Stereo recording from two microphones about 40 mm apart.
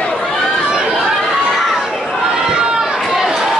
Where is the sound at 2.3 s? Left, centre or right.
Centre.